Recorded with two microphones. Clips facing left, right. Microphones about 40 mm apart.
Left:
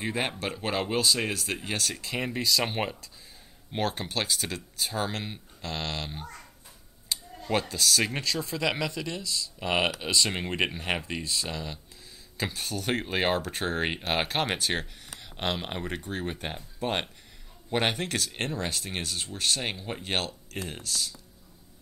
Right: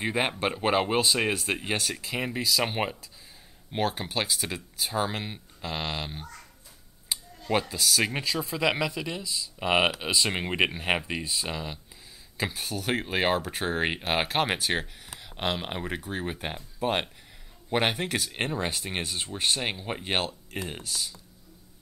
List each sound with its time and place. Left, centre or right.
0.0 s speech: centre
0.4 s speech: right
1.9 s speech: centre